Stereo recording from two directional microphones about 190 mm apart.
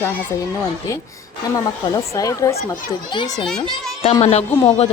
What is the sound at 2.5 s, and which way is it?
Speech, 45° left (ahead or behind).